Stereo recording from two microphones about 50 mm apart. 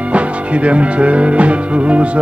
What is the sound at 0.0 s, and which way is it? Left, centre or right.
Music, right.